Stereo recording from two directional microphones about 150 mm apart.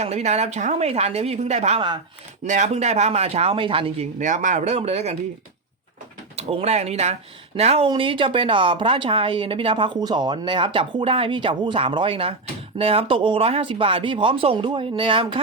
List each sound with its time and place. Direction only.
0.0 s speech: 45° right (ahead or behind)
4.2 s speech: 55° right (ahead or behind)
6.3 s a woman's voice: 45° right (ahead or behind)